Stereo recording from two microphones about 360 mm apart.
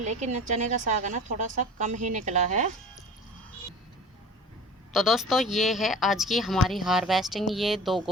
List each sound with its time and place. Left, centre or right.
0.0 s a woman's voice: centre
4.9 s speech: centre